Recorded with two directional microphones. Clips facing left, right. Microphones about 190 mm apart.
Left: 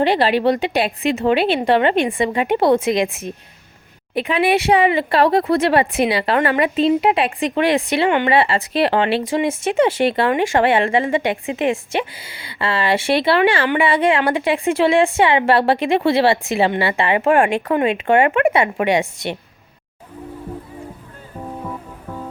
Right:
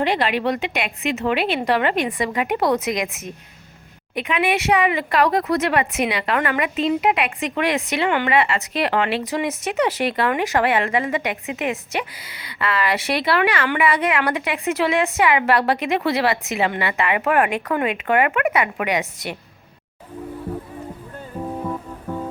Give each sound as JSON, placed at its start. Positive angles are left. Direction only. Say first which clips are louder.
{"t": 0.0, "sound": "speech", "louder": "left 5 dB", "side_deg": 30}